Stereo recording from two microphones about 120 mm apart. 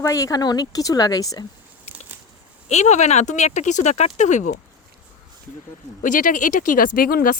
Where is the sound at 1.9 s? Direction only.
60° left (ahead or behind).